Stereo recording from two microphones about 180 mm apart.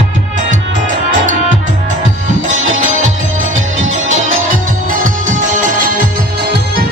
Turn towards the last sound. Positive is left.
turn(degrees=-45)  # may be behind; listen again after turning